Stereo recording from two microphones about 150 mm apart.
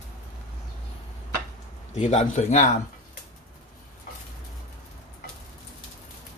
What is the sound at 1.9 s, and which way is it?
Speech, 50° left (ahead or behind).